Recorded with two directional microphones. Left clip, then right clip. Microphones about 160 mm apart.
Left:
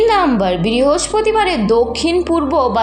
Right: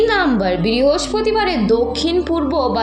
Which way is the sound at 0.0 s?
20° left (ahead or behind).